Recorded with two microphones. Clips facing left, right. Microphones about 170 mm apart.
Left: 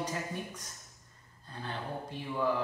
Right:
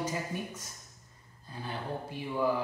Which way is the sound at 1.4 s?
10° right (ahead or behind).